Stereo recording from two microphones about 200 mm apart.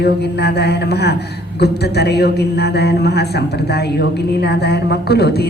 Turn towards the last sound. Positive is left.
turn(degrees=55)  # may be behind; listen again after turning